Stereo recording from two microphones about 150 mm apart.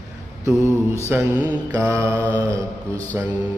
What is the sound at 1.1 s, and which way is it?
Mantra, 15° right (ahead or behind).